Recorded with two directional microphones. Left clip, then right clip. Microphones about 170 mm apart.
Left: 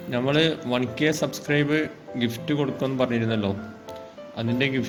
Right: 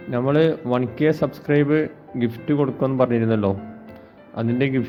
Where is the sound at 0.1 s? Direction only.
35° right (ahead or behind).